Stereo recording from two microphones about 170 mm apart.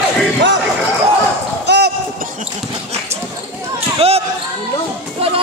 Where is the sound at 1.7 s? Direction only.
70° right (ahead or behind).